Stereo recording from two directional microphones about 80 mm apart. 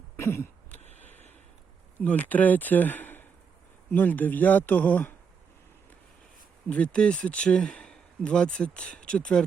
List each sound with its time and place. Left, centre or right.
0.2 s a sound: left
2.0 s speech: centre
6.7 s speech: centre